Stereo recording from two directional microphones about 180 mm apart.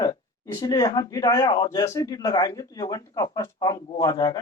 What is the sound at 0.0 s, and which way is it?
A man's voice, 20° left (ahead or behind).